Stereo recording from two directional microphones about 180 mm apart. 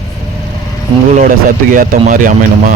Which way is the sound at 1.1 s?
50° right (ahead or behind).